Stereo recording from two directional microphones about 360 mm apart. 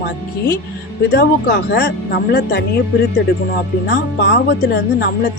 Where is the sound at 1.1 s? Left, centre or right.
Left.